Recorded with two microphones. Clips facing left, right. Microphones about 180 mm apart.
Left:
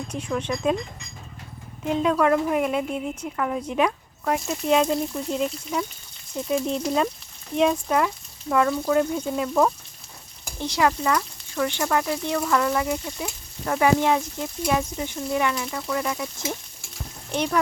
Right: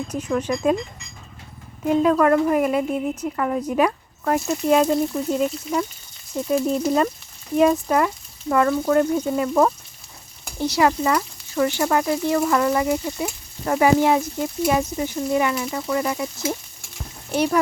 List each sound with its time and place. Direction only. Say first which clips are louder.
0.1 s speech: right 4 dB; 5° right (ahead or behind)
1.8 s speech: right 4 dB; centre (ahead or behind)